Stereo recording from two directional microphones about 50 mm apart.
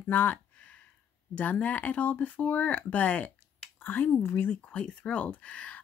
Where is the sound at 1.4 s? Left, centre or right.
Left.